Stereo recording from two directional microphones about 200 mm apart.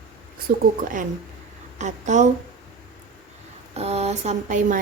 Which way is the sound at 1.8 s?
35° right (ahead or behind).